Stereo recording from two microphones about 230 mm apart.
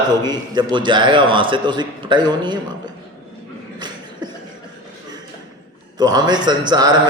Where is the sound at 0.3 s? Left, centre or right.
Centre.